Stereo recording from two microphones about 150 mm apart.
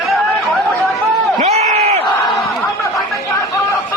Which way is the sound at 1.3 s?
45° right (ahead or behind).